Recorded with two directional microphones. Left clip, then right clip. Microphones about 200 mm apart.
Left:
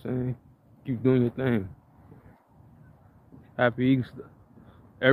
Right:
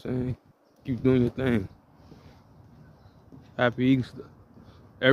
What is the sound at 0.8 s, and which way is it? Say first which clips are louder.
Speech: even; 5° right (ahead or behind).